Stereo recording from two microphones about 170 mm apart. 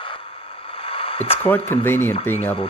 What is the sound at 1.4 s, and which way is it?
Speech, 10° left (ahead or behind).